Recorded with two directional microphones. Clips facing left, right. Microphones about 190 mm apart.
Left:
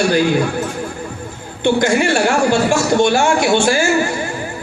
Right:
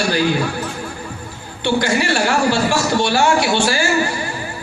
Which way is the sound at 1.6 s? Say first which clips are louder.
Left 4 dB; 50° left (ahead or behind).